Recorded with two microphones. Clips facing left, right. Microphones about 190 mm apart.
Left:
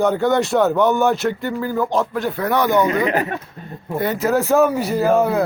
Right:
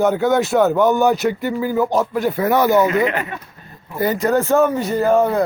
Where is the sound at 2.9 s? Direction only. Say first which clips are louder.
Even; 35° left (ahead or behind).